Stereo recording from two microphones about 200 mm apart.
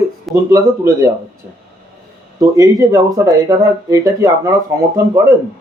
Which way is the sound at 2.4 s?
15° right (ahead or behind).